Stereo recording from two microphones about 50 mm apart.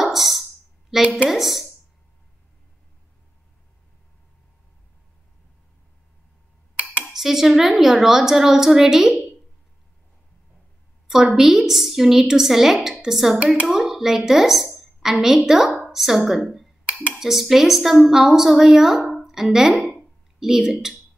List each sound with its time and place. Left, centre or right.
0.0 s a sound: centre
0.9 s speech: centre
6.8 s cutlery: right
7.1 s a woman's voice: centre
11.1 s a woman's voice: centre
20.0 s a sound: centre